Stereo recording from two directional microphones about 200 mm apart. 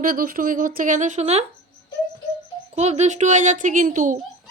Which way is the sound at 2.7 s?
35° right (ahead or behind).